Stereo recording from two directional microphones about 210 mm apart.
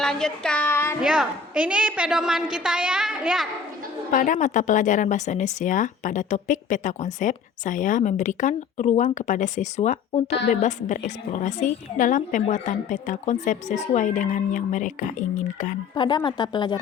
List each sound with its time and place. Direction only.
0.0 s child singing: 5° left (ahead or behind)
1.0 s a woman's voice: 5° right (ahead or behind)
4.1 s speech: 40° left (ahead or behind)
16.0 s speech: 20° left (ahead or behind)